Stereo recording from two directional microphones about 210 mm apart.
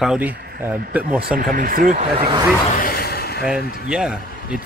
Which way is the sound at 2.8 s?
45° left (ahead or behind).